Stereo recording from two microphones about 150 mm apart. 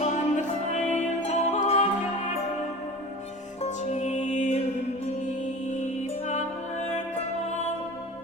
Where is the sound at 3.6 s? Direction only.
50° left (ahead or behind).